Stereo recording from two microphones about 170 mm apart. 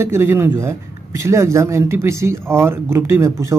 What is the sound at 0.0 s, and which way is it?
Speech, 15° right (ahead or behind).